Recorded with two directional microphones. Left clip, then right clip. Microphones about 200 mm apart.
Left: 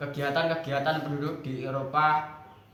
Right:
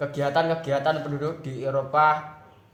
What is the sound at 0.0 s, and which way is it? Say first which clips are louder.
Speech: right 4 dB; 55° right (ahead or behind).